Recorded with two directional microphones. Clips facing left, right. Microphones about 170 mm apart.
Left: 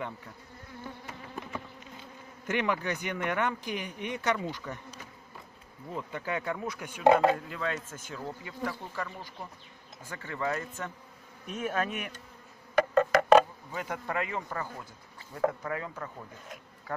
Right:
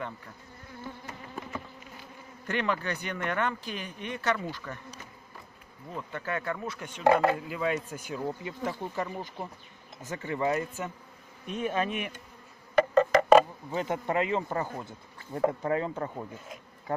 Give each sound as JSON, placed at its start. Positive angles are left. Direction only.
{"t": 1.4, "sound": "insect", "side_deg": 0}
{"t": 2.0, "sound": "speech", "side_deg": 15}
{"t": 5.9, "sound": "speech", "side_deg": 15}
{"t": 7.3, "sound": "speech", "side_deg": -10}
{"t": 11.4, "sound": "speech", "side_deg": 5}
{"t": 12.9, "sound": "a sound", "side_deg": 0}
{"t": 13.7, "sound": "speech", "side_deg": -25}